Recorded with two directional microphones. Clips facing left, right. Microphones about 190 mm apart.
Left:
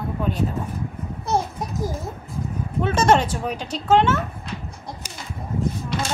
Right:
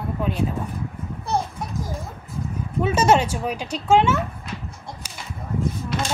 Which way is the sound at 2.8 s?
10° right (ahead or behind).